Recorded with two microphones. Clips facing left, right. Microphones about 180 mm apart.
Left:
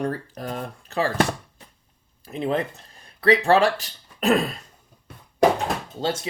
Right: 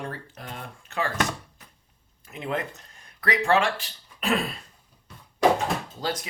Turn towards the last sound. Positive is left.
turn(degrees=25)  # may be behind; listen again after turning